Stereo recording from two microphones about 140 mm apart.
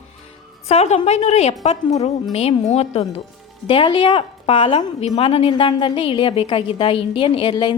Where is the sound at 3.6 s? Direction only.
35° left (ahead or behind).